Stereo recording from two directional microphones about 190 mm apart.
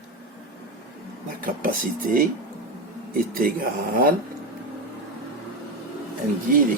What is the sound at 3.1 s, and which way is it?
Speech, 45° right (ahead or behind).